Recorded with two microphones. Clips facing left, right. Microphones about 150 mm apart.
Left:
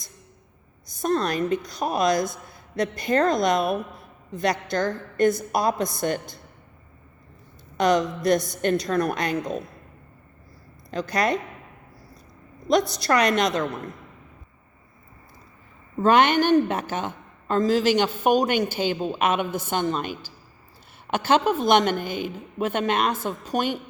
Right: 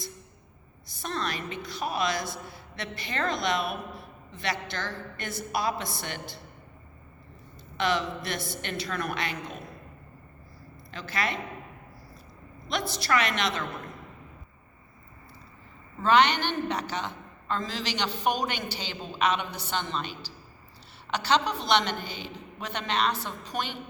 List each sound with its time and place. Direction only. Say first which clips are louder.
0.9 s a woman's voice: left 9 dB; 45° left (ahead or behind)
7.8 s a woman's voice: left 7 dB; 45° left (ahead or behind)
10.9 s a woman's voice: left 8 dB; 45° left (ahead or behind)
12.7 s a woman's voice: left 7 dB; 45° left (ahead or behind)
16.0 s a woman's voice: left 5 dB; 50° left (ahead or behind)